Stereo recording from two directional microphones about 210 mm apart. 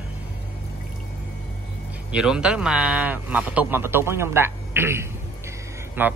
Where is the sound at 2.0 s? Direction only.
5° right (ahead or behind).